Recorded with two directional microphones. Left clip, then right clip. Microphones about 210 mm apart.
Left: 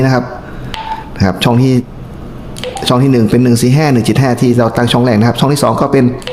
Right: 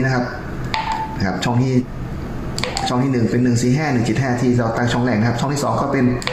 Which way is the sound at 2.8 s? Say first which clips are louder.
Left 10 dB; 50° left (ahead or behind).